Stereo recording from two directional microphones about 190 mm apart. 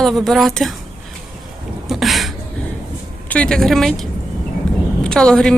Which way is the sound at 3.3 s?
5° left (ahead or behind).